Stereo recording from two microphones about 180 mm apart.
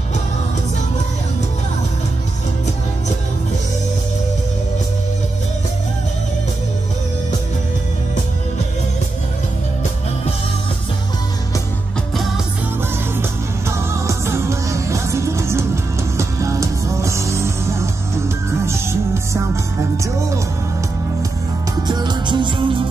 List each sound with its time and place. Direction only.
13.2 s music: 15° right (ahead or behind)
21.8 s music: 25° right (ahead or behind)